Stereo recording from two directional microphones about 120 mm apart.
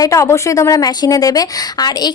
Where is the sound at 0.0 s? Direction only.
25° left (ahead or behind).